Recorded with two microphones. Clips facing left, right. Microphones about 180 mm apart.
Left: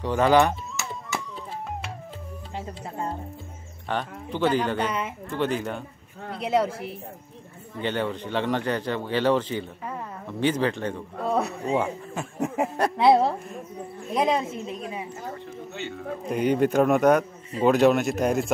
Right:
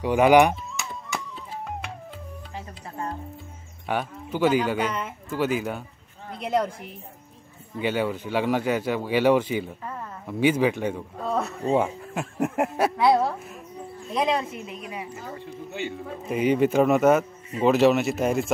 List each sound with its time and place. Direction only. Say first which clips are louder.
0.0 s speech: right 3 dB; 10° right (ahead or behind)
2.5 s a woman's voice: left 4 dB; 20° left (ahead or behind)
3.8 s a man's voice: right 1 dB; 10° right (ahead or behind)
6.4 s a man's voice: left 1 dB; 5° left (ahead or behind)
7.8 s speech: right 2 dB; 10° right (ahead or behind)
11.2 s speech: left 2 dB; 10° left (ahead or behind)
11.7 s speech: right 3 dB; 5° right (ahead or behind)
12.9 s a woman's voice: left 5 dB; 25° left (ahead or behind)
15.7 s a man's voice: right 1 dB; 5° right (ahead or behind)